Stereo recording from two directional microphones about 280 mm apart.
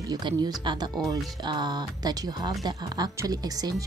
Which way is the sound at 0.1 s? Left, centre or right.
Centre.